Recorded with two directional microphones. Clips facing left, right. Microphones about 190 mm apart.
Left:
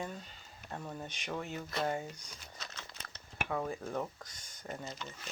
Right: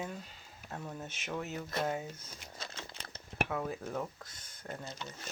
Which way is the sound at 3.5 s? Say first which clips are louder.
Even; 5° right (ahead or behind).